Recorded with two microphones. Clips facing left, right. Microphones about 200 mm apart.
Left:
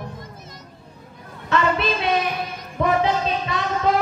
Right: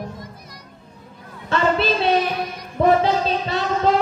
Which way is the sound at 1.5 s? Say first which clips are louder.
Right 2 dB; 30° right (ahead or behind).